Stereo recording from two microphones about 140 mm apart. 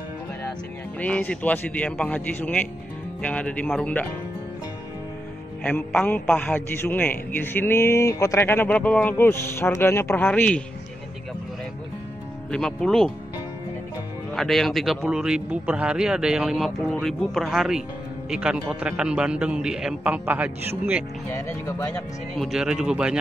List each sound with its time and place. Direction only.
0.9 s a man's voice: 10° left (ahead or behind)
5.6 s a man's voice: 10° left (ahead or behind)
12.4 s speech: 5° left (ahead or behind)
14.3 s a man's voice: centre (ahead or behind)
21.3 s a man's voice: 20° left (ahead or behind)
22.4 s speech: 5° right (ahead or behind)